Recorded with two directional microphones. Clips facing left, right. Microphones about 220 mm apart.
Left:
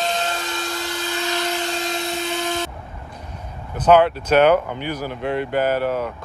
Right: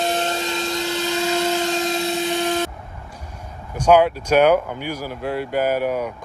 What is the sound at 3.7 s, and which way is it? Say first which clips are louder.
Speech: even; 10° right (ahead or behind).